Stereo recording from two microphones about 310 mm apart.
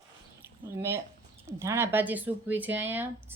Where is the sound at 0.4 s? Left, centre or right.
Centre.